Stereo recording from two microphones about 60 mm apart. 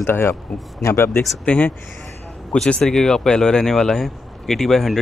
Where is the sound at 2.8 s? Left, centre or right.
Centre.